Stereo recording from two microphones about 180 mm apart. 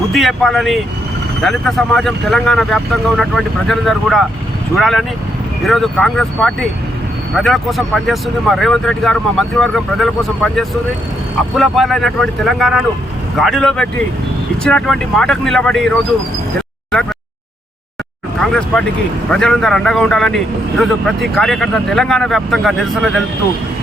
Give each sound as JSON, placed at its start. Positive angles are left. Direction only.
{"t": 0.1, "sound": "a man's voice", "side_deg": 0}
{"t": 18.3, "sound": "a man's voice", "side_deg": 5}